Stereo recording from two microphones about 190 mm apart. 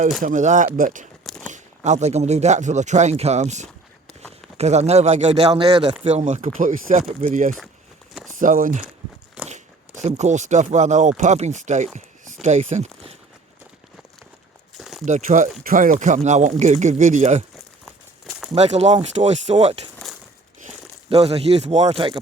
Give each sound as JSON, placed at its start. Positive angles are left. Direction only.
{"t": 0.2, "sound": "speech", "side_deg": -40}
{"t": 1.2, "sound": "a sound", "side_deg": 0}
{"t": 1.5, "sound": "speech", "side_deg": -40}
{"t": 9.4, "sound": "biting", "side_deg": -5}
{"t": 10.0, "sound": "speech", "side_deg": -35}
{"t": 14.8, "sound": "a sound", "side_deg": 0}
{"t": 15.0, "sound": "speech", "side_deg": -40}
{"t": 17.8, "sound": "a sound", "side_deg": 0}
{"t": 18.5, "sound": "speech", "side_deg": -35}